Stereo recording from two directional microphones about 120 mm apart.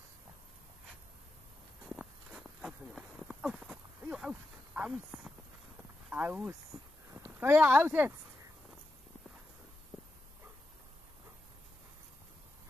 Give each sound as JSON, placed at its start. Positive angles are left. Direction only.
{"t": 1.9, "sound": "walk", "side_deg": -5}
{"t": 4.7, "sound": "a sound", "side_deg": -10}
{"t": 7.2, "sound": "speech", "side_deg": -20}